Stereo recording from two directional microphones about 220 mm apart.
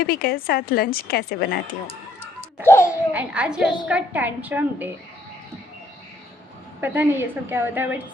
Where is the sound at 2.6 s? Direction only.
10° left (ahead or behind).